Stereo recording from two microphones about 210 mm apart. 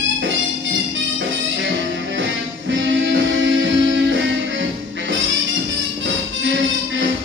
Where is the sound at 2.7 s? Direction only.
60° right (ahead or behind).